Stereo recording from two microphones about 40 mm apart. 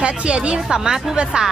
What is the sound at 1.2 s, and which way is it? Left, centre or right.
Speech, right.